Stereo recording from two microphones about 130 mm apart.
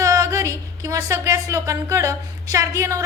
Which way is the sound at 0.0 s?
25° right (ahead or behind).